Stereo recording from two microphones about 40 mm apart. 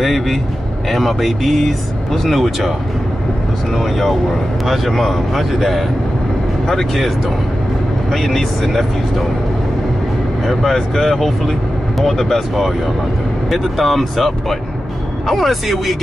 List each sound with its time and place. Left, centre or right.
0.0 s speech: centre
3.7 s speech: centre
8.1 s speech: centre
10.4 s speech: centre